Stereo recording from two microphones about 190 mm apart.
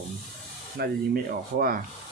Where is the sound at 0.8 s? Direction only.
55° right (ahead or behind).